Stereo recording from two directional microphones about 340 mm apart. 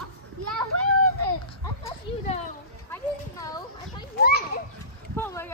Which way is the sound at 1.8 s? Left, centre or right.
Centre.